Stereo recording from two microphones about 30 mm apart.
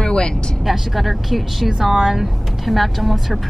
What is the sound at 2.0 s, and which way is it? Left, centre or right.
Speech, centre.